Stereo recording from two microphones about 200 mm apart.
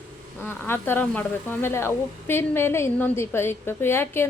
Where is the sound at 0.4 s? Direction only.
10° left (ahead or behind).